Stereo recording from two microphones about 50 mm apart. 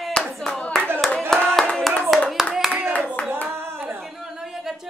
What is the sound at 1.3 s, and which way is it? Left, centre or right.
Hands, centre.